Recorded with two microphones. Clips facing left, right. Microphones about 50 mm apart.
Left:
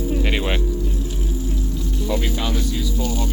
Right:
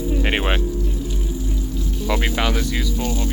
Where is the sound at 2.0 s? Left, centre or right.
Right.